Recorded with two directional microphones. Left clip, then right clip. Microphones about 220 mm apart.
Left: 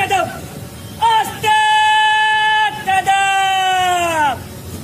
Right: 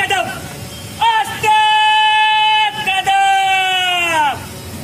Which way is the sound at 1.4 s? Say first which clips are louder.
Right 2 dB; 10° left (ahead or behind).